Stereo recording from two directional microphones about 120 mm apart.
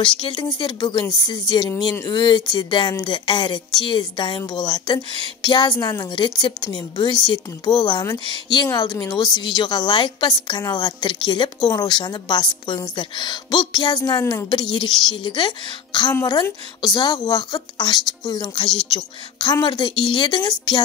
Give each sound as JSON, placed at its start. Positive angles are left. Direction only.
{"t": 0.0, "sound": "a woman's voice", "side_deg": 40}